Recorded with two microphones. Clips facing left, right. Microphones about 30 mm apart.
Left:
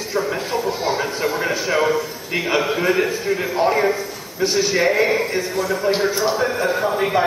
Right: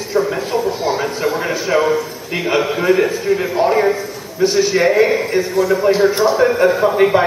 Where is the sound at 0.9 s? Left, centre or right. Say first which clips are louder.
Right 3 dB; centre.